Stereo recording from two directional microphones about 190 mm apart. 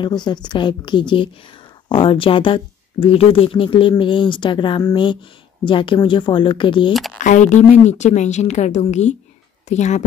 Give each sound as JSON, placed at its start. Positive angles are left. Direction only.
{"t": 0.0, "sound": "speech", "side_deg": 25}
{"t": 6.9, "sound": "speech", "side_deg": 0}
{"t": 7.2, "sound": "speech", "side_deg": 40}